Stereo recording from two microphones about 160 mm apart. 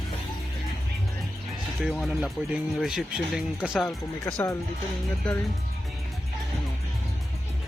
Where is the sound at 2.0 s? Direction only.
Centre (ahead or behind).